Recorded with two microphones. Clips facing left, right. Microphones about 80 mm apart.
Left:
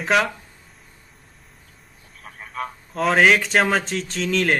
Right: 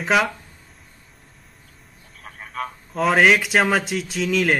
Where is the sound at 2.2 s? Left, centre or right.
Centre.